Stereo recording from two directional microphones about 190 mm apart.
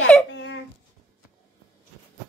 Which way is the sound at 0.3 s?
70° left (ahead or behind).